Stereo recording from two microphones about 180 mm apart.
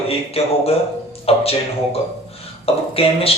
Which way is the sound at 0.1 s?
35° left (ahead or behind).